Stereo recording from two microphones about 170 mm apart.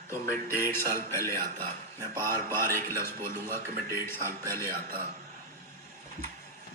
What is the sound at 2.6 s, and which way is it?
Speech, 15° left (ahead or behind).